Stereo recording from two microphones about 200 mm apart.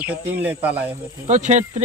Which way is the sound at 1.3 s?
35° right (ahead or behind).